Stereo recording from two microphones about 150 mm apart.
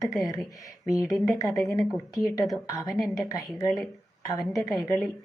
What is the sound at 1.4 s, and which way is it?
Speech, 25° left (ahead or behind).